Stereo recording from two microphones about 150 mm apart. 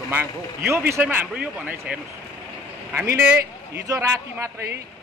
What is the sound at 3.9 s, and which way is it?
Speech, 20° right (ahead or behind).